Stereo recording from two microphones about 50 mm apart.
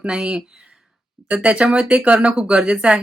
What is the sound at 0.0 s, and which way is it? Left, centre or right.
Speech, right.